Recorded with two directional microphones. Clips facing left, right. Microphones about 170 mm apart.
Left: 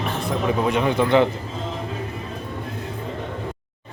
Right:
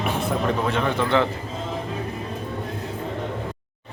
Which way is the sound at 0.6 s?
15° left (ahead or behind).